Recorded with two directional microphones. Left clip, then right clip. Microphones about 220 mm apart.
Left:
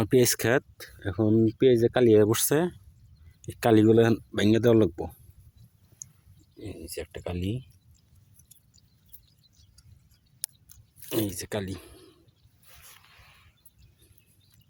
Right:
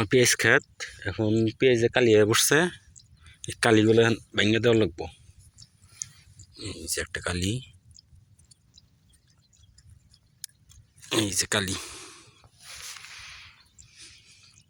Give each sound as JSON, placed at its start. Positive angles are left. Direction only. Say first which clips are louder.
{"t": 0.0, "sound": "speech", "louder": "right 2 dB", "side_deg": 25}
{"t": 3.8, "sound": "speech", "louder": "left 2 dB", "side_deg": 30}
{"t": 6.0, "sound": "pig", "louder": "right 8 dB", "side_deg": 20}
{"t": 6.6, "sound": "speech", "louder": "right 5 dB", "side_deg": 5}
{"t": 11.1, "sound": "speech", "louder": "right 5 dB", "side_deg": 5}